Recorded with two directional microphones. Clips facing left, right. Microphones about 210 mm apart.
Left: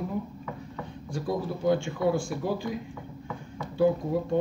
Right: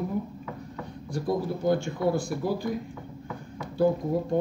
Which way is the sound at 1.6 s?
40° right (ahead or behind).